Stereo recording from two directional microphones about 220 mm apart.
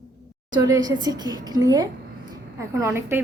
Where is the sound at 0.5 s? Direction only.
15° right (ahead or behind).